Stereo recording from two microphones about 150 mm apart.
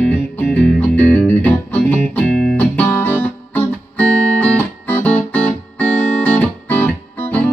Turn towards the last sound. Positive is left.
turn(degrees=10)  # may be behind; listen again after turning